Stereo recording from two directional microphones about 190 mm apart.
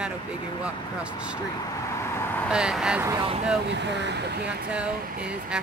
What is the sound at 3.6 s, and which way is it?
Speech, 65° right (ahead or behind).